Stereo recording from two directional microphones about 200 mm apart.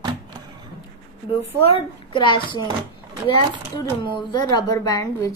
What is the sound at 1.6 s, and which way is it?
A woman's voice, 25° left (ahead or behind).